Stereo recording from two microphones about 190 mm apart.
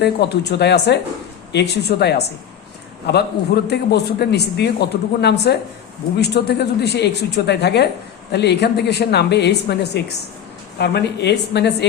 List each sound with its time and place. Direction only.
0.0 s a man's voice: 60° left (ahead or behind)